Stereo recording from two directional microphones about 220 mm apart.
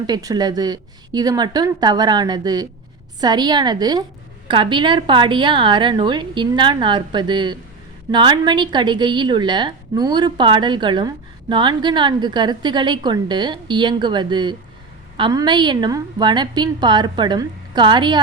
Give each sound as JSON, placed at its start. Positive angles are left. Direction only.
{"t": 0.1, "sound": "a woman's voice", "side_deg": -15}